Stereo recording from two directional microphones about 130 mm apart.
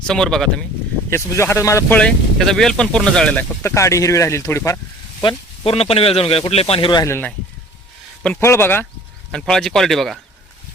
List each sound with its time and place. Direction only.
0.1 s speech: 5° left (ahead or behind)
1.1 s speech: 20° left (ahead or behind)
2.0 s speech: 5° left (ahead or behind)
3.6 s speech: 20° left (ahead or behind)
5.2 s speech: 50° left (ahead or behind)
7.0 s speech: 15° left (ahead or behind)
8.4 s speech: 20° left (ahead or behind)
9.3 s speech: 5° left (ahead or behind)